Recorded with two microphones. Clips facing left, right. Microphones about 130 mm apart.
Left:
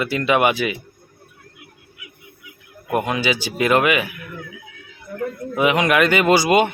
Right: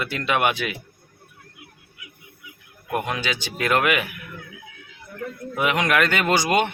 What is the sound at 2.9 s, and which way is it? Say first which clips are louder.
Speech: left 5 dB; 5° left (ahead or behind).